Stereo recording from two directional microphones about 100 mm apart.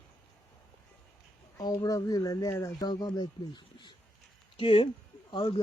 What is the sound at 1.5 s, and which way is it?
Speech, 35° left (ahead or behind).